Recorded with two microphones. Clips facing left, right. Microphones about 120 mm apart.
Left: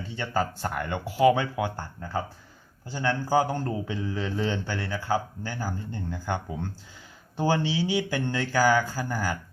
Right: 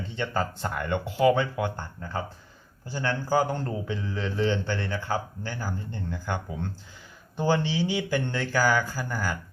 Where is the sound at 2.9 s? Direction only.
15° left (ahead or behind).